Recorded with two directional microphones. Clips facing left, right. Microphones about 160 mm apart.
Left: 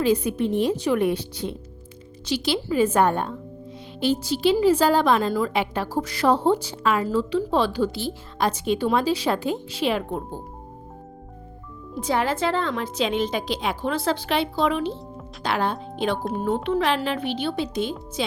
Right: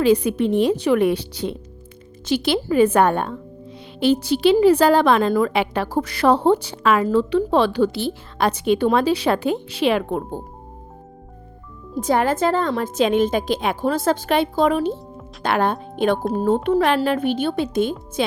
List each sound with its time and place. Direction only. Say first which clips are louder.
0.0 s a woman's voice: right 4 dB; 75° right (ahead or behind)
2.2 s a woman's voice: right 5 dB; 55° right (ahead or behind); by 10.4 s 70° right (ahead or behind)
11.9 s a woman's voice: right 5 dB; 45° right (ahead or behind)